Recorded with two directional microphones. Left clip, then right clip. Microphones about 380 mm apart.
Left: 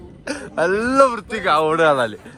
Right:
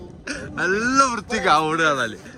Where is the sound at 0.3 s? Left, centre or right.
Centre.